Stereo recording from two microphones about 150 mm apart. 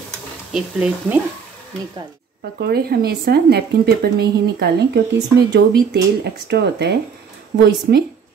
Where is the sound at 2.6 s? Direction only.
90° right.